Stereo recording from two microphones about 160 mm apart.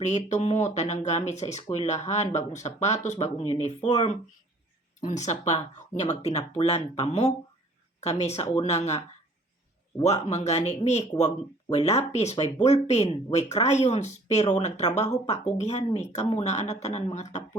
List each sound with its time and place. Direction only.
0.0 s speech: 45° left (ahead or behind)